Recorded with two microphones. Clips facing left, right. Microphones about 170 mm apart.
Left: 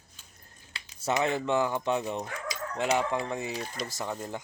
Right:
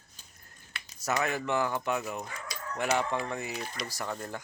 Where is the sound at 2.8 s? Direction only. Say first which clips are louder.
Left 2 dB; 15° left (ahead or behind).